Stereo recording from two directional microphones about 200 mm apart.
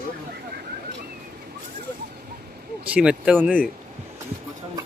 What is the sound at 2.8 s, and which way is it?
Speech, 5° right (ahead or behind).